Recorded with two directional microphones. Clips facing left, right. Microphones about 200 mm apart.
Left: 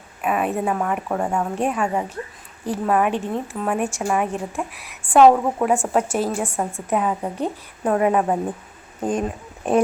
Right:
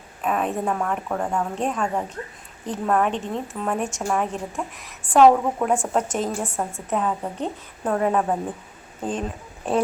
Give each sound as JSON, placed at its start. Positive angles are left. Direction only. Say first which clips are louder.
{"t": 0.2, "sound": "a woman's voice", "louder": "left 2 dB", "side_deg": 10}
{"t": 9.6, "sound": "a woman's voice", "louder": "left 4 dB", "side_deg": 15}